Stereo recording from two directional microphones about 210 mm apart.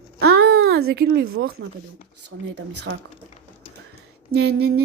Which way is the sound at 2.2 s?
90° right.